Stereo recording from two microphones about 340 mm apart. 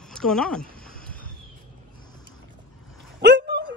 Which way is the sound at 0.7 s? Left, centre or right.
Left.